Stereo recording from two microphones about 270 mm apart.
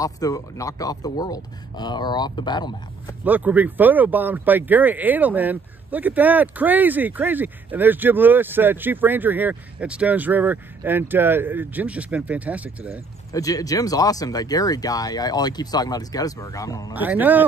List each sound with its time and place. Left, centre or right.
0.0 s speech: centre
3.3 s speech: centre
13.3 s speech: centre
16.9 s speech: centre